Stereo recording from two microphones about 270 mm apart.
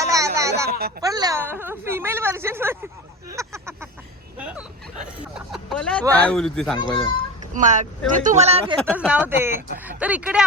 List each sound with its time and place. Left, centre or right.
0.0 s a sound: centre
0.7 s speech: right
1.0 s speech: centre
3.2 s a sound: centre
4.4 s speech: centre
7.5 s speech: right
8.8 s speech: centre